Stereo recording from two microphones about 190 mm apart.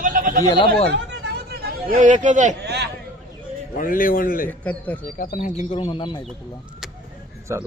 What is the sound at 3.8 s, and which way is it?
Speech, 45° left (ahead or behind).